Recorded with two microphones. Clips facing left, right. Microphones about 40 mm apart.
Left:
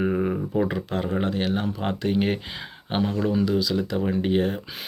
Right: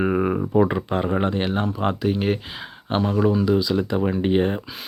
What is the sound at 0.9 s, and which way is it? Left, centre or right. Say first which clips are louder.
Speech: right 4 dB; right.